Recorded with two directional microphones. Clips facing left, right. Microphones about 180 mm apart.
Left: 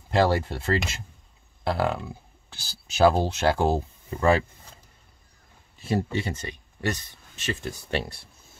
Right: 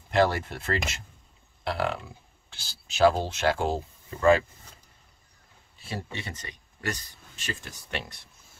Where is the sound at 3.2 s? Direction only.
35° left (ahead or behind).